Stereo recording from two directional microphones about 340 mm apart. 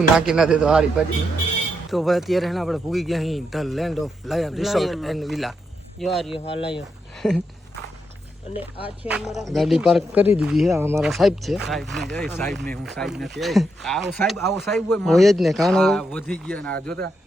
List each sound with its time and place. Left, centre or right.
0.2 s speech: centre
6.3 s speech: centre
6.7 s speech: centre
8.5 s speech: centre